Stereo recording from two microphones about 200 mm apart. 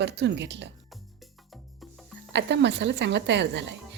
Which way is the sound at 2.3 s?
60° right (ahead or behind).